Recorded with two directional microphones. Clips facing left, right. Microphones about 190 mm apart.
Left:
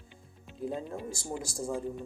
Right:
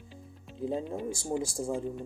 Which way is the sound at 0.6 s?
25° right (ahead or behind).